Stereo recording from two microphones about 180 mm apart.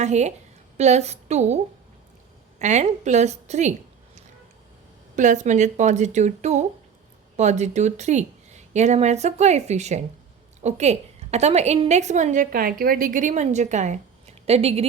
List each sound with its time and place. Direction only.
0.0 s a woman's voice: 40° right (ahead or behind)
2.6 s a woman's voice: 40° right (ahead or behind)
5.1 s a woman's voice: 45° right (ahead or behind)